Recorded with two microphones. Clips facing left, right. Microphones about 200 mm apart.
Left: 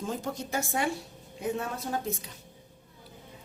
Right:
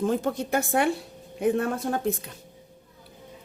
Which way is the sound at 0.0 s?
60° right (ahead or behind).